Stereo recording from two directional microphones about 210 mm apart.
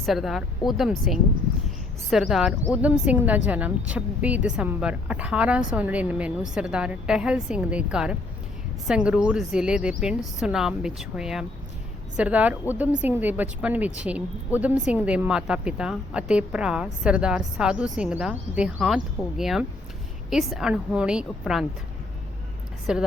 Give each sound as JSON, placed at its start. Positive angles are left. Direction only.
{"t": 0.0, "sound": "a woman's voice", "side_deg": 0}
{"t": 22.9, "sound": "a woman's voice", "side_deg": -5}